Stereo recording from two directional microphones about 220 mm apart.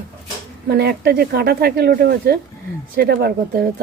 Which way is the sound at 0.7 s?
45° right (ahead or behind).